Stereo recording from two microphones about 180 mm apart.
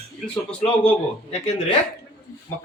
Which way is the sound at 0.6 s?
35° left (ahead or behind).